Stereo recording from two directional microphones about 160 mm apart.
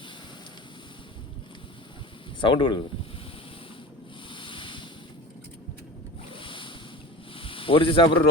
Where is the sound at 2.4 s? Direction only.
30° left (ahead or behind).